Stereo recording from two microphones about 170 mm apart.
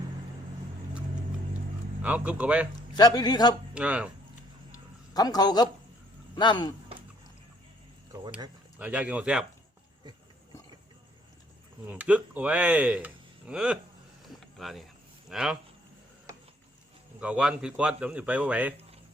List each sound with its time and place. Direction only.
2.0 s speech: 10° right (ahead or behind)
2.9 s a man's voice: 25° left (ahead or behind)
3.8 s speech: 5° right (ahead or behind)
4.7 s a sound: 20° left (ahead or behind)
6.3 s a man's voice: 25° left (ahead or behind)
8.8 s speech: 10° right (ahead or behind)
11.9 s speech: 10° right (ahead or behind)
14.3 s a sound: centre (ahead or behind)
15.3 s speech: centre (ahead or behind)
17.2 s speech: 5° right (ahead or behind)